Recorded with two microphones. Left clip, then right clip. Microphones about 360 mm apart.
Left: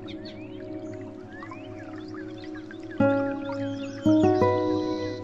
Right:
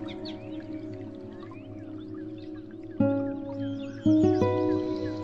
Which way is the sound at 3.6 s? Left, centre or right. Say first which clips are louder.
Left 3 dB; centre.